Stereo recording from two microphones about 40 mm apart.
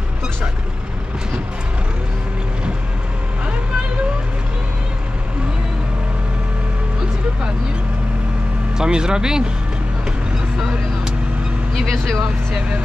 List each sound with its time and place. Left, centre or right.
8.7 s speech: centre
11.8 s speech: centre